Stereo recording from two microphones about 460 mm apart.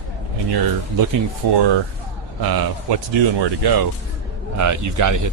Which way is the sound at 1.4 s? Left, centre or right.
Right.